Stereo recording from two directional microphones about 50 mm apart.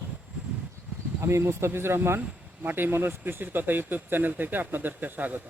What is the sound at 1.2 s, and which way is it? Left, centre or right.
Speech, right.